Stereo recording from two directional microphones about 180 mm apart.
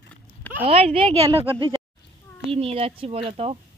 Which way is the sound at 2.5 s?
35° right (ahead or behind).